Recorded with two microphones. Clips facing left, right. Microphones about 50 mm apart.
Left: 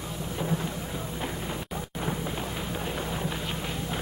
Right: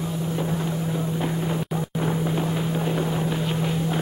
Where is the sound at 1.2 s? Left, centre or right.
Right.